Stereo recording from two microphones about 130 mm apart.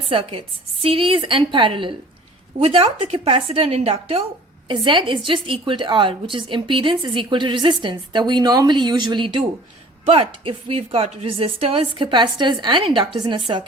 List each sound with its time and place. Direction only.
0.1 s a woman's voice: 45° right (ahead or behind)